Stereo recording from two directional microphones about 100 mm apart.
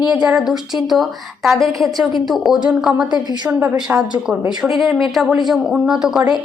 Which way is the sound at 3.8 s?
5° right (ahead or behind).